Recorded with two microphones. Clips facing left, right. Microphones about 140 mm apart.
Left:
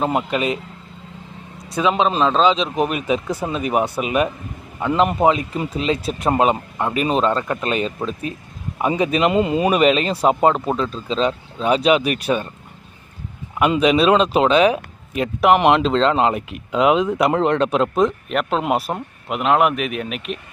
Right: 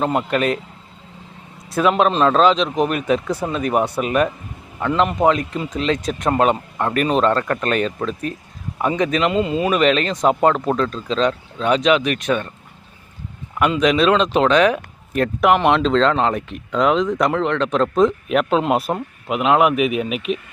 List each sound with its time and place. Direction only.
0.0 s speech: 5° left (ahead or behind)
1.7 s speech: centre (ahead or behind)
9.1 s speech: 20° left (ahead or behind)
9.8 s speech: 10° left (ahead or behind)
13.8 s speech: 5° left (ahead or behind)